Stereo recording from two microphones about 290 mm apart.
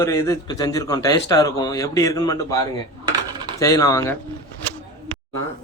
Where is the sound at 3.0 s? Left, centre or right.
Centre.